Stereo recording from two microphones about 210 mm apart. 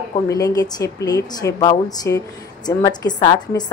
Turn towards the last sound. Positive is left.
turn(degrees=20)  # may be behind; listen again after turning